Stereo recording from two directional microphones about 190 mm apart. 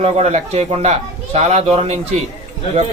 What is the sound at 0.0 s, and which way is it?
Mantra, 35° right (ahead or behind).